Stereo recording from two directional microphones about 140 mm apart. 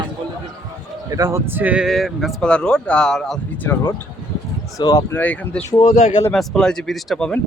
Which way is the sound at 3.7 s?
15° left (ahead or behind).